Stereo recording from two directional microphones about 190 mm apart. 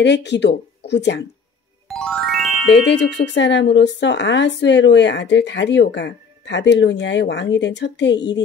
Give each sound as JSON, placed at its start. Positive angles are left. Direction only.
{"t": 0.0, "sound": "speech", "side_deg": 65}
{"t": 1.9, "sound": "music", "side_deg": 0}
{"t": 2.7, "sound": "speech", "side_deg": 65}